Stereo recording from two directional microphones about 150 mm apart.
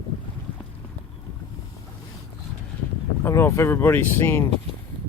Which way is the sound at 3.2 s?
20° left (ahead or behind).